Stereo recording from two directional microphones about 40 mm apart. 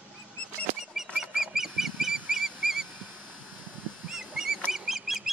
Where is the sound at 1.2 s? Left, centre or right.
Centre.